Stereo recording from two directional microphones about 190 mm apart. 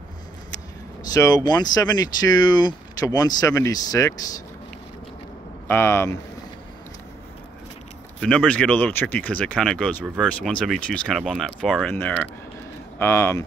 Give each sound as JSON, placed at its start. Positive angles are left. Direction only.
{"t": 1.0, "sound": "speech", "side_deg": 20}
{"t": 5.7, "sound": "speech", "side_deg": 10}
{"t": 8.2, "sound": "speech", "side_deg": 5}